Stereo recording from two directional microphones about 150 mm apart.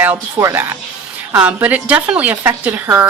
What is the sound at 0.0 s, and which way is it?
A woman's voice, 15° right (ahead or behind).